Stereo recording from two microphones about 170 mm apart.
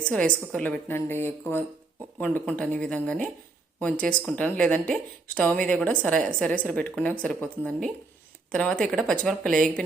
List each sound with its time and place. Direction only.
0.0 s speech: 5° left (ahead or behind)